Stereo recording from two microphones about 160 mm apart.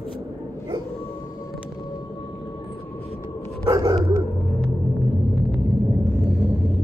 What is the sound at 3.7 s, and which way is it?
Dog, 25° right (ahead or behind).